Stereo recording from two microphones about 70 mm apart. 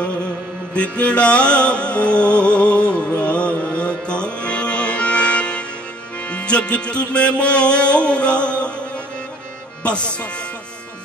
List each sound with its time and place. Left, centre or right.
0.7 s music: centre